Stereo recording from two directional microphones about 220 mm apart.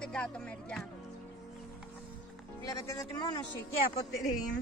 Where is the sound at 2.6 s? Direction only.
15° left (ahead or behind).